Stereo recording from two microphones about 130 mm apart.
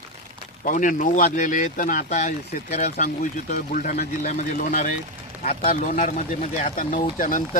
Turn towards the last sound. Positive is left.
turn(degrees=90)